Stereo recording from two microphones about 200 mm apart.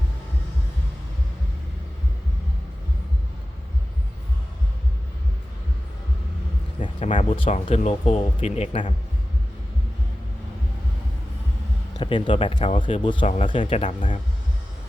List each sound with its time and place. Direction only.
6.8 s speech: 30° left (ahead or behind)
11.9 s speech: 25° left (ahead or behind)